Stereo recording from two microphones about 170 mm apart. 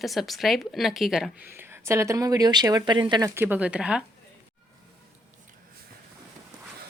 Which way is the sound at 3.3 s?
10° right (ahead or behind).